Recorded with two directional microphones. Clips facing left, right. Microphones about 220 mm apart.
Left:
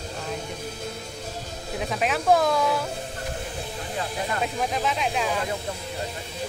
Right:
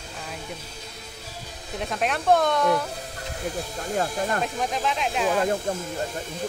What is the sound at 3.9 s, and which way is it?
Speech, 50° right (ahead or behind).